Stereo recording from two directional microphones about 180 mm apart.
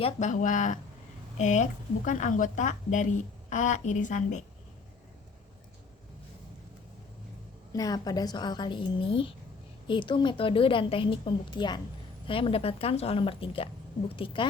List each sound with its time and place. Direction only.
0.0 s a woman's voice: 40° left (ahead or behind)
7.7 s a woman's voice: 20° left (ahead or behind)